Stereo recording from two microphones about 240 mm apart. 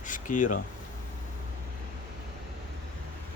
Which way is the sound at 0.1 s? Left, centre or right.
Left.